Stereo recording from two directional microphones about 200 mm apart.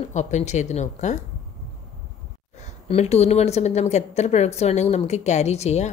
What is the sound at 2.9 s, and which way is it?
A woman's voice, 30° left (ahead or behind).